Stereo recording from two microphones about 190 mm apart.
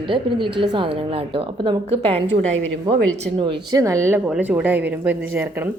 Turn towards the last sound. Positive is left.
turn(degrees=-10)  # may be behind; listen again after turning